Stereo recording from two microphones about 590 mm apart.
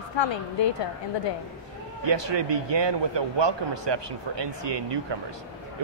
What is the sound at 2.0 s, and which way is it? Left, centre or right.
Speech, right.